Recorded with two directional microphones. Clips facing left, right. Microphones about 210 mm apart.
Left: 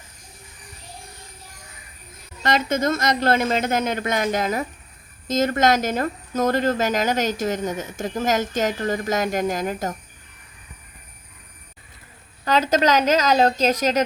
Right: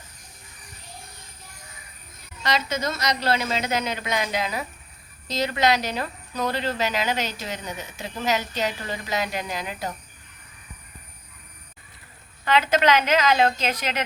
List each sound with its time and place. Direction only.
2.4 s speech: 50° left (ahead or behind)
12.5 s a woman's voice: 40° left (ahead or behind)